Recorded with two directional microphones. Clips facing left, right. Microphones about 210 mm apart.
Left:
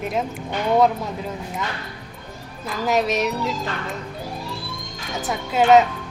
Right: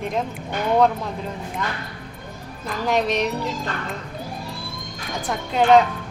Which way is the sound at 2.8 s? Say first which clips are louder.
Left 1 dB; 5° left (ahead or behind).